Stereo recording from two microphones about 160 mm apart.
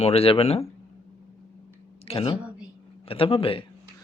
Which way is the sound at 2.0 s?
35° left (ahead or behind).